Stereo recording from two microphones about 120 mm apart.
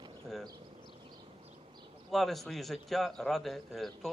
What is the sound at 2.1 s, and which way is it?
A man's voice, centre (ahead or behind).